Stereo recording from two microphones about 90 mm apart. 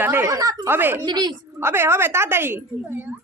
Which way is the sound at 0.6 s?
25° right (ahead or behind).